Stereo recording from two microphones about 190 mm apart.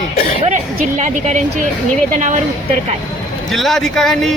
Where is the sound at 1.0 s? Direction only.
40° right (ahead or behind).